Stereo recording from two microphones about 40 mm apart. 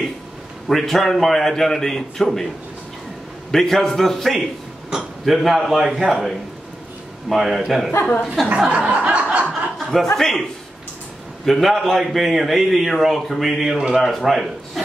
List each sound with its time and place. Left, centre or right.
0.7 s a man's voice: centre
3.5 s a man's voice: centre
7.2 s a man's voice: centre
8.5 s chuckle: right
9.8 s speech: centre
11.4 s a man's voice: centre
14.0 s a man's voice: centre